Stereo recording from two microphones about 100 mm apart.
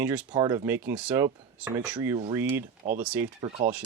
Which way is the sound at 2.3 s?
25° right (ahead or behind).